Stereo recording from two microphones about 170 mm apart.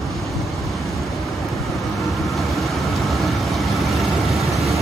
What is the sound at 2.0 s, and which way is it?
Vehicle, centre (ahead or behind).